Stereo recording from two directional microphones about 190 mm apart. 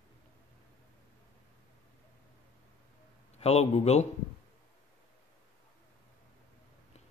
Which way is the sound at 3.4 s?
35° left (ahead or behind).